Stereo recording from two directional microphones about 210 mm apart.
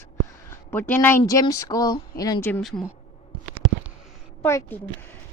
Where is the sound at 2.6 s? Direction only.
Centre (ahead or behind).